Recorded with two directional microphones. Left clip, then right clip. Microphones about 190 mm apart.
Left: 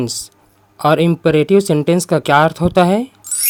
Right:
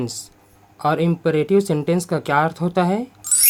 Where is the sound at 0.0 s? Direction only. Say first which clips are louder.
Left 6 dB; 40° left (ahead or behind).